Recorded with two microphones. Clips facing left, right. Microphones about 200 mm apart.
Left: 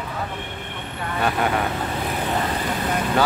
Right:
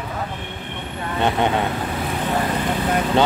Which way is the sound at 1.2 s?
25° right (ahead or behind).